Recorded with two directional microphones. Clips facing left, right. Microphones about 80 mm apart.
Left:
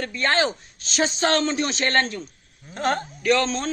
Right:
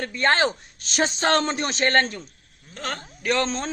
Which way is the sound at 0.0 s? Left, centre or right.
Right.